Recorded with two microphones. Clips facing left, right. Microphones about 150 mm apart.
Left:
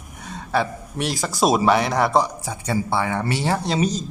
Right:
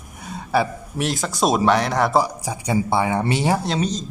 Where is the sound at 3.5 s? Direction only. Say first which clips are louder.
Left 1 dB; centre (ahead or behind).